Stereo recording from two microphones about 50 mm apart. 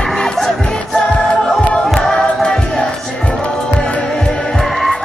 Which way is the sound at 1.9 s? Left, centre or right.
Centre.